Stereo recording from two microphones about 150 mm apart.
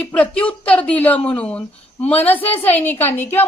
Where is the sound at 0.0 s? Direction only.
5° left (ahead or behind).